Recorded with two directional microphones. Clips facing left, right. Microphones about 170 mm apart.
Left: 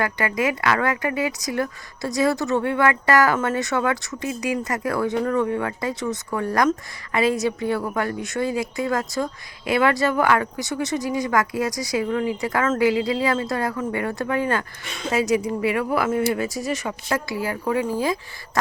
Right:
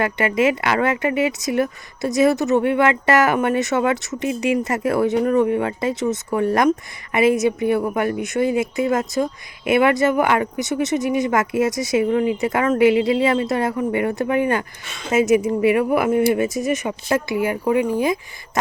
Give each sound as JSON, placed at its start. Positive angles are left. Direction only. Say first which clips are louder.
{"t": 0.0, "sound": "a woman's voice", "louder": "right 5 dB", "side_deg": -25}